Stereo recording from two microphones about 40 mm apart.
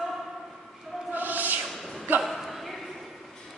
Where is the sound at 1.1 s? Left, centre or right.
Right.